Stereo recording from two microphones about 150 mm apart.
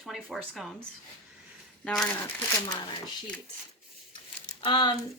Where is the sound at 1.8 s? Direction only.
5° left (ahead or behind).